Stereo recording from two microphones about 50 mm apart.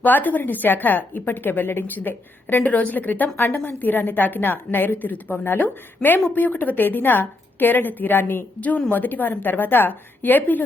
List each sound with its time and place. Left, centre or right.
0.0 s a woman's voice: left